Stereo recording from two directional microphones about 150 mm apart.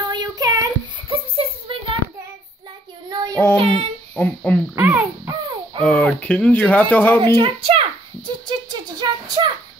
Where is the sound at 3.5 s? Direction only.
40° right (ahead or behind).